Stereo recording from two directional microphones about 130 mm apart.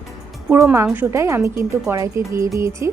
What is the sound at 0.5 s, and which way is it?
A woman's voice, 20° right (ahead or behind).